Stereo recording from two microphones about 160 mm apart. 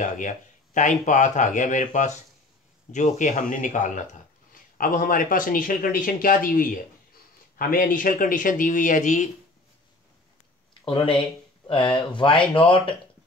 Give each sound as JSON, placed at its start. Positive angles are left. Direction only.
{"t": 0.7, "sound": "speech", "side_deg": 50}
{"t": 10.9, "sound": "speech", "side_deg": 30}